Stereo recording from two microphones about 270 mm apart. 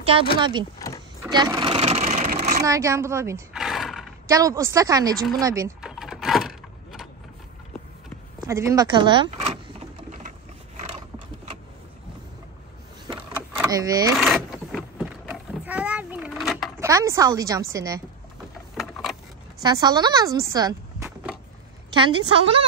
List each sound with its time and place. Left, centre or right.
0.4 s a woman's voice: centre
0.7 s vehicle: centre
1.2 s vehicle: centre
2.6 s a sound: centre
4.3 s a woman's voice: centre
5.4 s door: centre
8.5 s a woman's voice: centre
13.0 s power windows: centre
14.2 s vehicle: centre
16.8 s a woman's voice: centre
18.8 s a sound: centre
19.6 s a woman's voice: centre